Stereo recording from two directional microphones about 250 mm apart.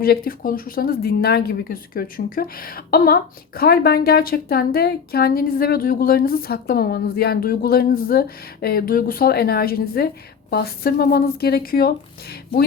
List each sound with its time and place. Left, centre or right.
0.0 s speech: left